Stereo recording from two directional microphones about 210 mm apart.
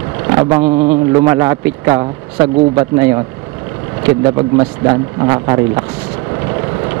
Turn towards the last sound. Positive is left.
turn(degrees=-20)  # may be behind; listen again after turning